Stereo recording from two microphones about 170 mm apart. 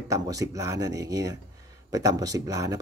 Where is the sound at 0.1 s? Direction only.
20° right (ahead or behind).